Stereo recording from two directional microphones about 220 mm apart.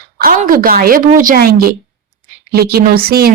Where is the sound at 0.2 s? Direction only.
40° right (ahead or behind).